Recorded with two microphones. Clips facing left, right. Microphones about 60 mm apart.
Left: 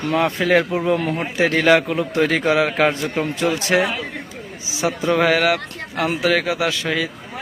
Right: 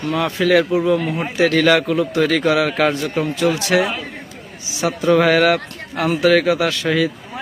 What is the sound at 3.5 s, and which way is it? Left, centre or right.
Speech, left.